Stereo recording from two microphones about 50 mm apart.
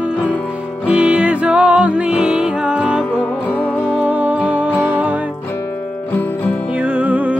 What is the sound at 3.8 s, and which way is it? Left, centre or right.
Music, right.